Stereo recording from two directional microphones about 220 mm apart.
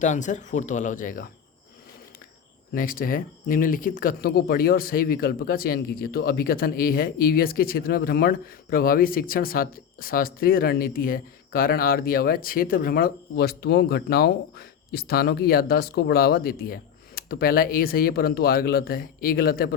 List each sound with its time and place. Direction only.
0.0 s speech: 35° left (ahead or behind)
2.7 s speech: 40° left (ahead or behind)